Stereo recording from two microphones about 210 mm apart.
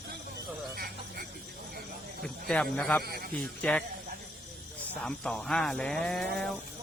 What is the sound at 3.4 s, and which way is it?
Speech, 5° left (ahead or behind).